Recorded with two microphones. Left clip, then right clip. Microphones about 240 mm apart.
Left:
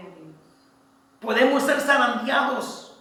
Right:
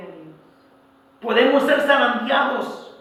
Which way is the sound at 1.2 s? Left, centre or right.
Left.